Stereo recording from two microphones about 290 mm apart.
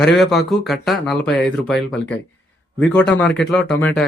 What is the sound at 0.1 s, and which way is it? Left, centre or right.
Speech, centre.